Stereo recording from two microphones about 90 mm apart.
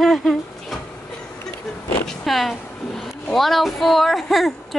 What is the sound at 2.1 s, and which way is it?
A woman's voice, centre (ahead or behind).